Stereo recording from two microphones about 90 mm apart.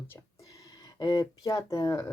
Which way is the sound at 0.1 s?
40° left (ahead or behind).